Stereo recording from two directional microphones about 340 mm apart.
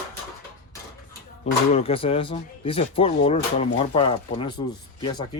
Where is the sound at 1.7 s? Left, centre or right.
Centre.